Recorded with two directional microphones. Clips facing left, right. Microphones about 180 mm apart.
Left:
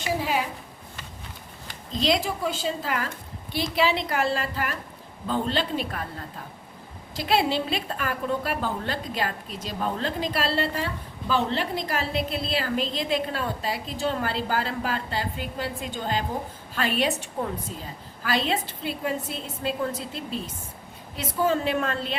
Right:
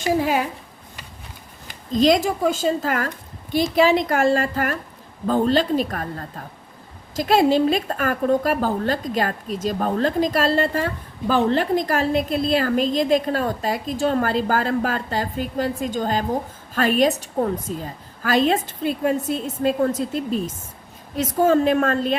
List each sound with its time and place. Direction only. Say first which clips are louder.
0.0 s a woman's voice: right 6 dB; 50° right (ahead or behind)
1.9 s a woman's voice: right 8 dB; 45° right (ahead or behind)